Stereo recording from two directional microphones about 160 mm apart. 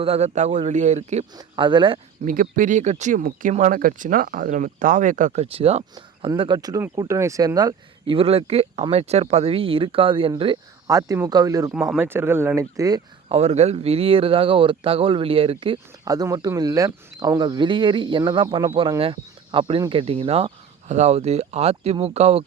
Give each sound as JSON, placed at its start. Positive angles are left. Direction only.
{"t": 0.0, "sound": "speech", "side_deg": -40}
{"t": 1.4, "sound": "speech", "side_deg": -30}
{"t": 2.2, "sound": "speech", "side_deg": -55}
{"t": 10.8, "sound": "speech", "side_deg": -20}
{"t": 11.7, "sound": "speech", "side_deg": -5}
{"t": 13.2, "sound": "speech", "side_deg": -40}
{"t": 16.0, "sound": "speech", "side_deg": -25}